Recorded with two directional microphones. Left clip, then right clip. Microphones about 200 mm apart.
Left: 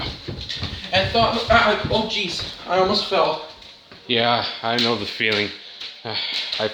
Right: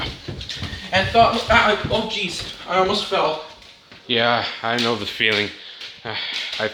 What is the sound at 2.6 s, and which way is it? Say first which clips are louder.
Speech: even; 20° left (ahead or behind).